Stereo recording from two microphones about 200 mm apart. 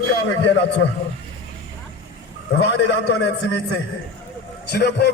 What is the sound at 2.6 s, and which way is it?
A man's voice, 65° left (ahead or behind).